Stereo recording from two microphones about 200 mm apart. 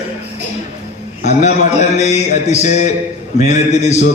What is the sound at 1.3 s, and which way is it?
A man's voice, 35° left (ahead or behind).